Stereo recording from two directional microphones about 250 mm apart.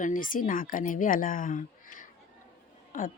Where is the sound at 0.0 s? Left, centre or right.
Left.